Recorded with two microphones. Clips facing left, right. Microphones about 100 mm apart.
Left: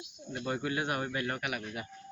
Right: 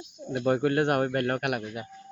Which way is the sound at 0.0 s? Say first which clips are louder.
Right 10 dB; 45° right (ahead or behind).